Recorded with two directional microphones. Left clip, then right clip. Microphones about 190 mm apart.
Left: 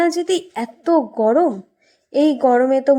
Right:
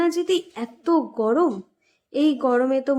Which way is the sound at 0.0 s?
20° left (ahead or behind).